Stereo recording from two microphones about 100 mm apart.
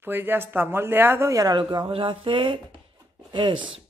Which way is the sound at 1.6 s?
55° right (ahead or behind).